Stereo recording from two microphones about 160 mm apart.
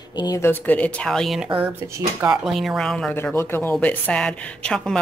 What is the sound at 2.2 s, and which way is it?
A woman's voice, centre (ahead or behind).